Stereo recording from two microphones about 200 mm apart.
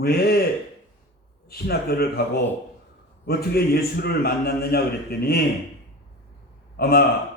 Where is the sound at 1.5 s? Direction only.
50° left (ahead or behind).